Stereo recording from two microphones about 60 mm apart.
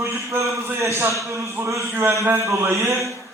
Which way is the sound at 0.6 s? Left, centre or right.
Right.